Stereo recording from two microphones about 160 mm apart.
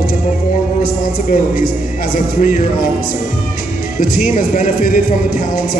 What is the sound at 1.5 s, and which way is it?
Music, 60° left (ahead or behind).